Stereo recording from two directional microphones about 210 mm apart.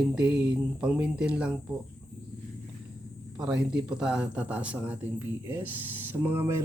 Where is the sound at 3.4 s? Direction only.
5° right (ahead or behind).